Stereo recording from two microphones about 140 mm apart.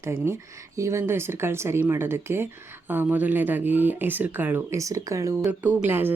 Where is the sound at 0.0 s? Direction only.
20° right (ahead or behind).